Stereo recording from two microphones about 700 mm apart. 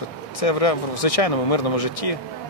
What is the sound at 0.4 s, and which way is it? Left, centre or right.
Speech, left.